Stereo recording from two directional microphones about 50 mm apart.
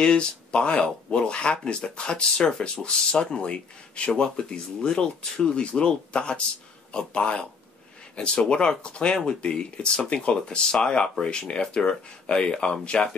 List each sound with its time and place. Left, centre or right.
0.0 s speech: centre